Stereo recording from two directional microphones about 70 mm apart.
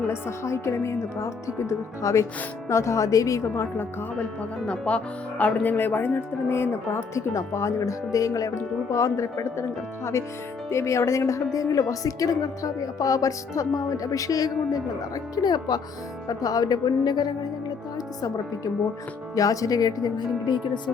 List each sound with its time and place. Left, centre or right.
0.1 s speech: left
3.5 s speech: left
4.6 s speech: centre
5.6 s speech: left
10.7 s speech: left
16.3 s speech: left
17.9 s speech: left